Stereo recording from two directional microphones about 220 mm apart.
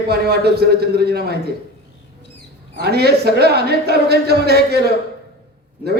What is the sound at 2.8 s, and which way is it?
A man's voice, 45° right (ahead or behind).